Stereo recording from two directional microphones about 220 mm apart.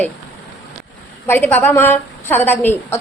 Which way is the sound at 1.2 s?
10° left (ahead or behind).